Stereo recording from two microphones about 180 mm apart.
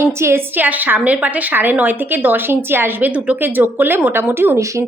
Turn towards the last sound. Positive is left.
turn(degrees=-15)  # may be behind; listen again after turning